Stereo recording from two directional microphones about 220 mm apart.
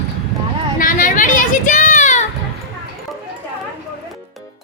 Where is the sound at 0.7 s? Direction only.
40° left (ahead or behind).